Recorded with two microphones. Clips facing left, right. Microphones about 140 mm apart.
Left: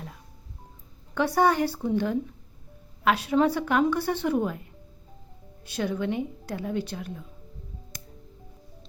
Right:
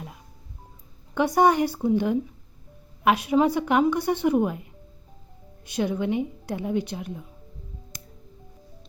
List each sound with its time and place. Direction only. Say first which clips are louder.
1.1 s a woman's voice: right 3 dB; 15° right (ahead or behind)
5.6 s a woman's voice: right 3 dB; 15° right (ahead or behind)